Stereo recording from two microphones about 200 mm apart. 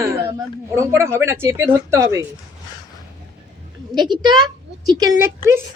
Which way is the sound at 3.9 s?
20° right (ahead or behind).